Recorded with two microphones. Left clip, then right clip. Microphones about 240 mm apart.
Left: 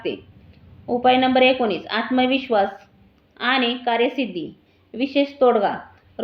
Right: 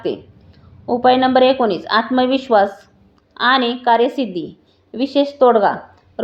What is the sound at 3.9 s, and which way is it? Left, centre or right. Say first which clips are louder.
A woman's voice: right 5 dB; right.